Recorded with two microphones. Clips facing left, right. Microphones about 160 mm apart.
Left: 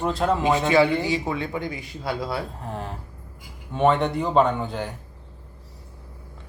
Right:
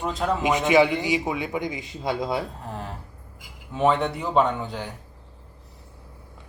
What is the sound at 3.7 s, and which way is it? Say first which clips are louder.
Speech: left 2 dB; centre (ahead or behind).